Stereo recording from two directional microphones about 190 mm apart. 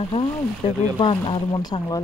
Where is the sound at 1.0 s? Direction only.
25° left (ahead or behind).